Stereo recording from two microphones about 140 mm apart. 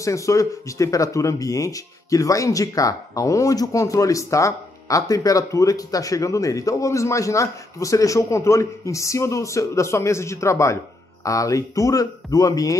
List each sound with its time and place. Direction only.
0.0 s speech: 20° left (ahead or behind)